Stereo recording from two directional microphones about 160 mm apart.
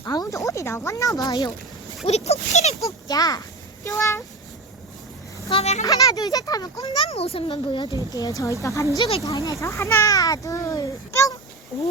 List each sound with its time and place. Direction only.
0.0 s speech: 20° left (ahead or behind)
2.0 s speech: 40° left (ahead or behind)
2.8 s a child's voice: 25° left (ahead or behind)
5.5 s speech: 40° left (ahead or behind)
5.8 s a child's voice: 20° left (ahead or behind)
7.1 s a child's voice: 40° left (ahead or behind); by 11.3 s 20° left (ahead or behind)